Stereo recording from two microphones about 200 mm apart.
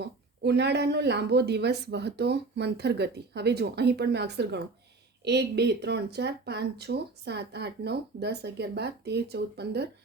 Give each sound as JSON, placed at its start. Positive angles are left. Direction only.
{"t": 0.0, "sound": "speech", "side_deg": -55}